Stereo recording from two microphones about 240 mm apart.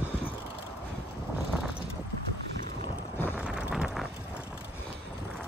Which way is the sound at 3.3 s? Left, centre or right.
Centre.